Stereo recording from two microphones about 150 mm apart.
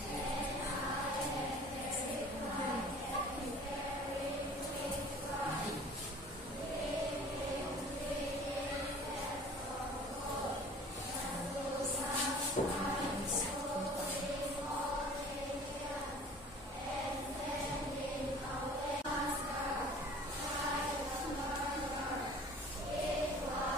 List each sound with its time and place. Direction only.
12.6 s music: 55° left (ahead or behind)